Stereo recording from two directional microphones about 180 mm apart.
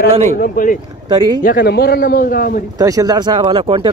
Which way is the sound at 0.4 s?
50° left (ahead or behind).